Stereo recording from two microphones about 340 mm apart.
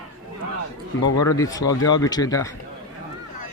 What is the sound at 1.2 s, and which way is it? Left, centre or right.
Speech, centre.